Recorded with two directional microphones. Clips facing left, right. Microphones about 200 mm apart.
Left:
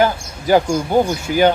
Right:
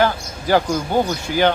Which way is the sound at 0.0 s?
15° left (ahead or behind).